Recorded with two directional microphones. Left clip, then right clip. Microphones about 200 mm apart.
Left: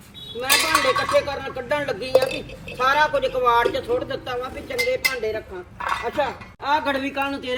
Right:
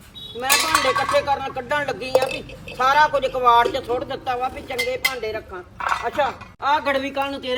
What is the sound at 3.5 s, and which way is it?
Speech, 35° right (ahead or behind).